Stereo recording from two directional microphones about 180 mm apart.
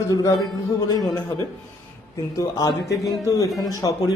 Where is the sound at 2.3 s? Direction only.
20° left (ahead or behind).